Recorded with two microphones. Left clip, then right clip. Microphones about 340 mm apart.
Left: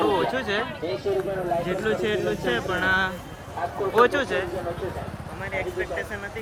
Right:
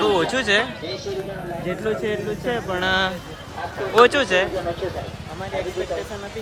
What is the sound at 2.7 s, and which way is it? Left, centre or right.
Speech, centre.